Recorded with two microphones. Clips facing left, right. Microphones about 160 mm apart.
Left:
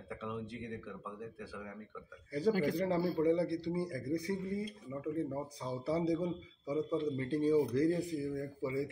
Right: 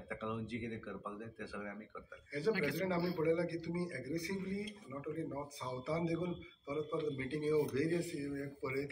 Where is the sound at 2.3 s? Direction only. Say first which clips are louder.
Left 4 dB; 40° left (ahead or behind).